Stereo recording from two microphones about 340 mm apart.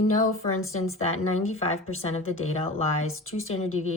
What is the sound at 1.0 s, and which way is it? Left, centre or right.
Speech, centre.